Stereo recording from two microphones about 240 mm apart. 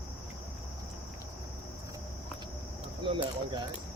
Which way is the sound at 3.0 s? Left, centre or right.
Right.